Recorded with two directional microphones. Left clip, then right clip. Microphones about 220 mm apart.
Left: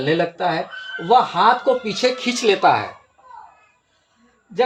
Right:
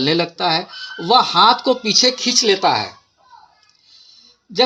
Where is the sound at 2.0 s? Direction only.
15° right (ahead or behind).